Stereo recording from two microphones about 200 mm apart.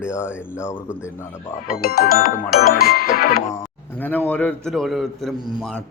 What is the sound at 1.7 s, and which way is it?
Music, 50° left (ahead or behind).